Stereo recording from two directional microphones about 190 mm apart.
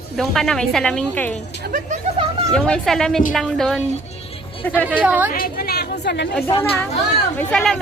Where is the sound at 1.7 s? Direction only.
40° right (ahead or behind).